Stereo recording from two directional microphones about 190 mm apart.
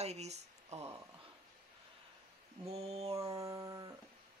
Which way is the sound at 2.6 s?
30° right (ahead or behind).